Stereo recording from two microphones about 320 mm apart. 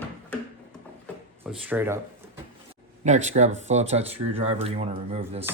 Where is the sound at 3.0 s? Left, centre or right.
Right.